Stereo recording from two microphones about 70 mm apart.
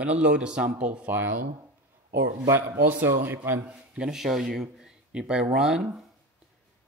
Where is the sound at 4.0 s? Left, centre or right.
Centre.